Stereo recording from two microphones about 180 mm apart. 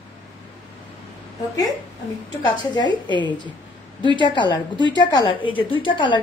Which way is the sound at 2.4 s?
25° left (ahead or behind).